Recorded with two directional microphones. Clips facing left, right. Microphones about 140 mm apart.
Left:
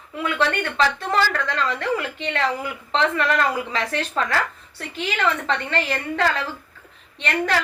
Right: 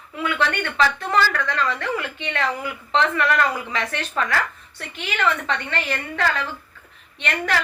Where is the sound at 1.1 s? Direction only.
30° left (ahead or behind).